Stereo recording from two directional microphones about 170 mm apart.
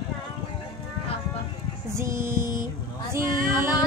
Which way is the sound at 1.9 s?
15° right (ahead or behind).